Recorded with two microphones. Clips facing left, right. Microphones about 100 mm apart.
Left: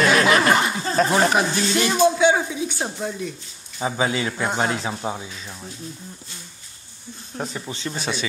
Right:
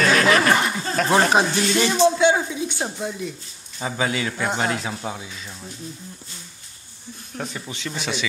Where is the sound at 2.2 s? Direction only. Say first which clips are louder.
Even; centre (ahead or behind).